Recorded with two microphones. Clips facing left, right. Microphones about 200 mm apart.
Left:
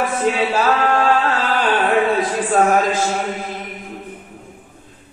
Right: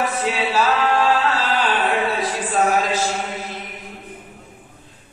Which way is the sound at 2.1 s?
50° left (ahead or behind).